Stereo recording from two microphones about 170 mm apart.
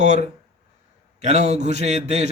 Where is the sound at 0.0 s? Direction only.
40° right (ahead or behind).